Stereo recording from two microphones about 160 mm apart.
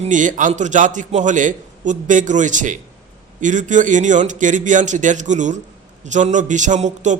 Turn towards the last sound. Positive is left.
turn(degrees=-50)  # may be behind; listen again after turning